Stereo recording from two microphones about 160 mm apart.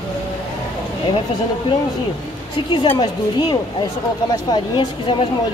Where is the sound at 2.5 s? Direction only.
30° left (ahead or behind).